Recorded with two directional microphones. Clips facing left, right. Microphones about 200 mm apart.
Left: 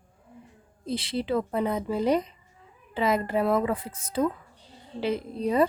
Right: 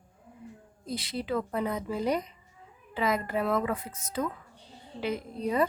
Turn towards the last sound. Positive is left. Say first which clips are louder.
# left 4 dB
turn(degrees=30)  # may be behind; listen again after turning